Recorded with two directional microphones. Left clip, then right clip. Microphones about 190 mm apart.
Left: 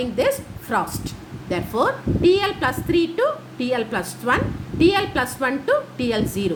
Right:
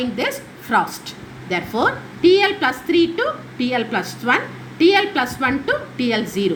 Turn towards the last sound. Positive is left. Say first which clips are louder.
# right 3 dB
turn(degrees=25)  # may be behind; listen again after turning